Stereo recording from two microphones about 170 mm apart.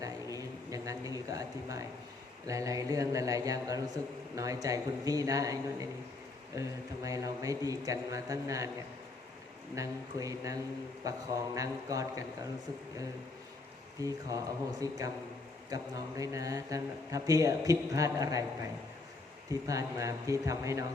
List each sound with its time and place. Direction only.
0.0 s a sound: 20° right (ahead or behind)
2.5 s a man's voice: 20° right (ahead or behind)
9.7 s a man's voice: 20° right (ahead or behind)
14.0 s a man's voice: 20° right (ahead or behind)
19.5 s a man's voice: 20° right (ahead or behind)